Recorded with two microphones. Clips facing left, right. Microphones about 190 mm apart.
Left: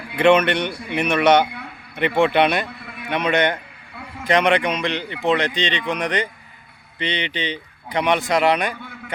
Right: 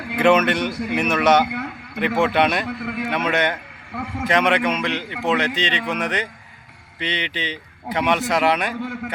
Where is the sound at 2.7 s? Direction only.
75° right (ahead or behind).